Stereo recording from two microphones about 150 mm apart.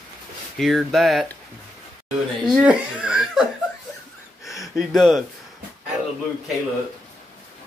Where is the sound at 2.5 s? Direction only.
10° right (ahead or behind).